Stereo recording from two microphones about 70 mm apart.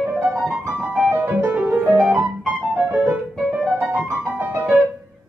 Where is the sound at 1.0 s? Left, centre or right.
Right.